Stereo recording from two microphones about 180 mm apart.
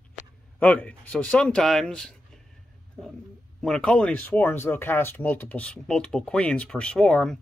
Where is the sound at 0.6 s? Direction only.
10° left (ahead or behind).